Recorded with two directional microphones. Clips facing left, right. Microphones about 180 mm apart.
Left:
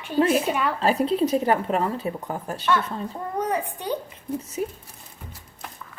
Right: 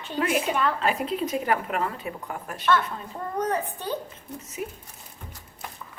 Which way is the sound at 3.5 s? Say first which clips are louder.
Left 2 dB; 15° left (ahead or behind).